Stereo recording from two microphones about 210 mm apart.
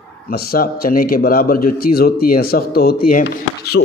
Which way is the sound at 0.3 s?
45° left (ahead or behind).